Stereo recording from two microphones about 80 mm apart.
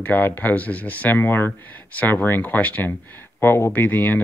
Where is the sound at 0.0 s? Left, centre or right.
Left.